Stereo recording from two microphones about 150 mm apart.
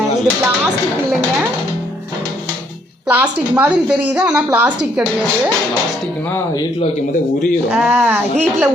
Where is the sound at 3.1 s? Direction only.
10° right (ahead or behind).